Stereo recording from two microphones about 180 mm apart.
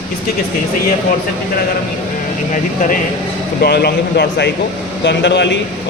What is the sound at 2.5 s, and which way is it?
Speech, 45° left (ahead or behind).